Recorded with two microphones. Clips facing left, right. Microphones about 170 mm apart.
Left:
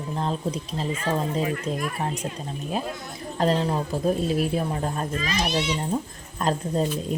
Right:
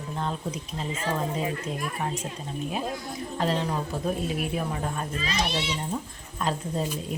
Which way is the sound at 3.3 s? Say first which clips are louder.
Left 5 dB; 35° left (ahead or behind).